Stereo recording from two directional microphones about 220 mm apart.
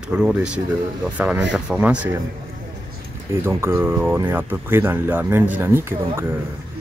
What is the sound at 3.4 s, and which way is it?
Speech, 10° right (ahead or behind).